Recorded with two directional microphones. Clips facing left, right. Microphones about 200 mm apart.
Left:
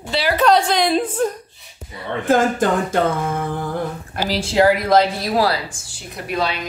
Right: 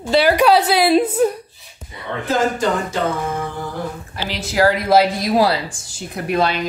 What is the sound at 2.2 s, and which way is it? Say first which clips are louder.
Speech: left 2 dB; 50° left (ahead or behind).